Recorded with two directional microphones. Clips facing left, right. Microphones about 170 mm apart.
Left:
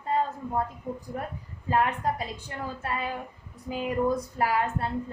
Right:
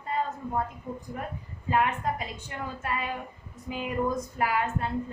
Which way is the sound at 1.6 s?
35° left (ahead or behind).